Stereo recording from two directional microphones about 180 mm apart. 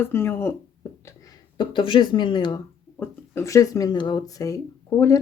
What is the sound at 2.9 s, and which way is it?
Speech, 15° left (ahead or behind).